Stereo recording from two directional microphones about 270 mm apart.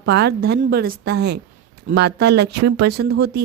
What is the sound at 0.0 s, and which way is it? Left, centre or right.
A woman's voice, right.